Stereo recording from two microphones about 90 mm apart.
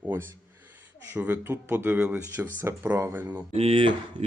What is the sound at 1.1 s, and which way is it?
Speech, 20° right (ahead or behind).